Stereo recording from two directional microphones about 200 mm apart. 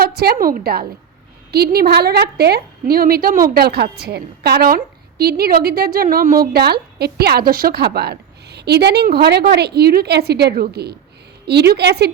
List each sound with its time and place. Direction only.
0.0 s a woman's voice: 50° right (ahead or behind)